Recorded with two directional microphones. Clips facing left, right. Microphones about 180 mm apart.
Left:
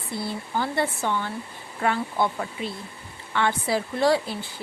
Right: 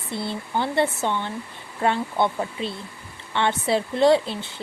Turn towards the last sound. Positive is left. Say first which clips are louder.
# right 4 dB
turn(degrees=-25)  # may be behind; listen again after turning